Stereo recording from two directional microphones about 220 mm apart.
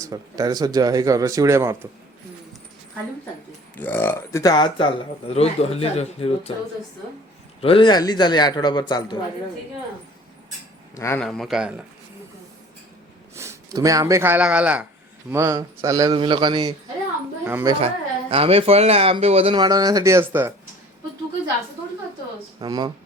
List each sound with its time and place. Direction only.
0.0 s speech: 15° right (ahead or behind)
3.8 s a man's voice: 10° left (ahead or behind); by 6.5 s 25° left (ahead or behind)
7.6 s a man's voice: 25° left (ahead or behind)
10.9 s a man's voice: 10° left (ahead or behind)
13.3 s speech: 10° right (ahead or behind)
17.7 s speech: 25° right (ahead or behind); by 20.5 s 10° right (ahead or behind)
22.6 s speech: 20° right (ahead or behind)